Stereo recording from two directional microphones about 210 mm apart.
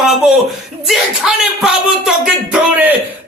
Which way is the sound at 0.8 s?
Centre (ahead or behind).